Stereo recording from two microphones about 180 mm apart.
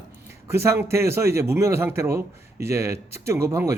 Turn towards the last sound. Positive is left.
turn(degrees=-15)  # may be behind; listen again after turning